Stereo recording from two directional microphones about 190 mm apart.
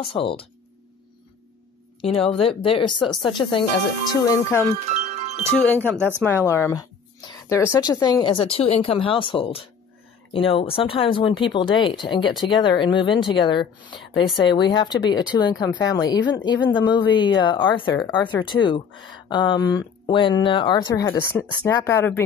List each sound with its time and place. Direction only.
0.0 s speech: 25° left (ahead or behind)
2.0 s speech: 30° left (ahead or behind)
3.1 s speech: centre (ahead or behind)
3.3 s speech: 25° left (ahead or behind)
4.1 s speech: 15° left (ahead or behind)
5.7 s speech: 10° left (ahead or behind)